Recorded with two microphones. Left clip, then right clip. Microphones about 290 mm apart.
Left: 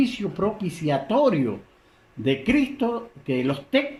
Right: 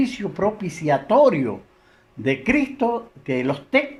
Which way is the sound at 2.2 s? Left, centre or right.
Right.